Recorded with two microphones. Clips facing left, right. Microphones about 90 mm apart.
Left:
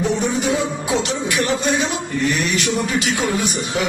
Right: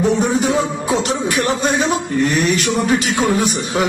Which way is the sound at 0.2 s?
40° right (ahead or behind).